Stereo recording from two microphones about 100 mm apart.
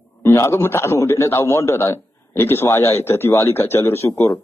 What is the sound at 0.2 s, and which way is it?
Speech, 25° left (ahead or behind).